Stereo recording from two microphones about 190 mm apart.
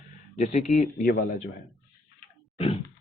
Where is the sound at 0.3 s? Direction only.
40° left (ahead or behind).